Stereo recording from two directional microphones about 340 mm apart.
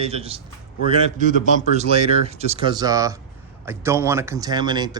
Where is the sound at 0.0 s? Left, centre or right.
Centre.